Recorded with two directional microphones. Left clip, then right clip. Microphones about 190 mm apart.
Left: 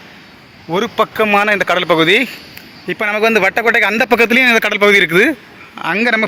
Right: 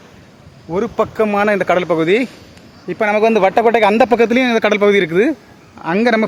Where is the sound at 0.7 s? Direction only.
Centre (ahead or behind).